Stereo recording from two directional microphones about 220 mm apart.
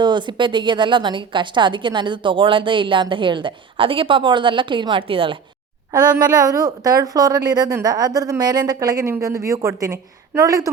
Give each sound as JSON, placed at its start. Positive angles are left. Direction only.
{"t": 0.0, "sound": "a woman's voice", "side_deg": -20}